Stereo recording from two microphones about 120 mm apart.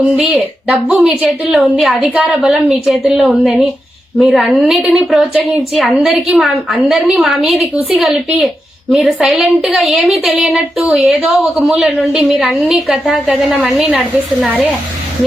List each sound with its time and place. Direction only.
0.2 s a woman's voice: centre (ahead or behind)
8.9 s a woman's voice: centre (ahead or behind)